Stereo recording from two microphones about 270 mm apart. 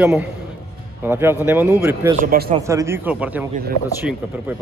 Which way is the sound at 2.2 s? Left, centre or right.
Right.